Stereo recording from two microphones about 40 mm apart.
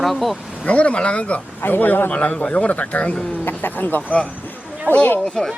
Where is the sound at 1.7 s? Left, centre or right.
Left.